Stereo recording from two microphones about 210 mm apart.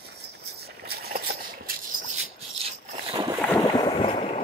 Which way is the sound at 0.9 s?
50° right (ahead or behind).